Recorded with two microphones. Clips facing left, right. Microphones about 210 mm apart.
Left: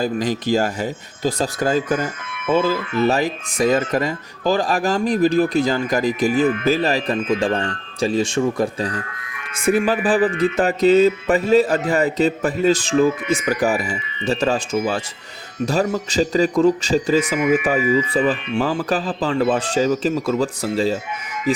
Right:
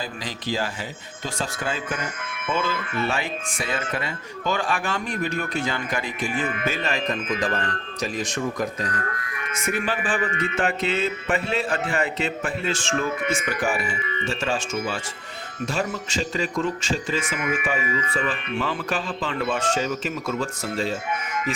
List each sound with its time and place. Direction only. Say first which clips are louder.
0.0 s speech: left 11 dB; 45° left (ahead or behind)
9.0 s speech: right 5 dB; 50° right (ahead or behind)
9.6 s speech: left 9 dB; 35° left (ahead or behind)